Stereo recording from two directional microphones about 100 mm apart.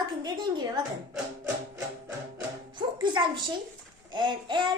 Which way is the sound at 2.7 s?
50° right (ahead or behind).